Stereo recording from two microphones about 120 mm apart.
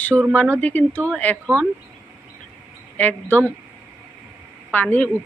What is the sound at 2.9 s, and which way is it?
Speech, 15° left (ahead or behind).